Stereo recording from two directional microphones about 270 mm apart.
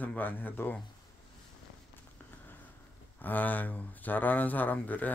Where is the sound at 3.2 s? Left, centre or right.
Centre.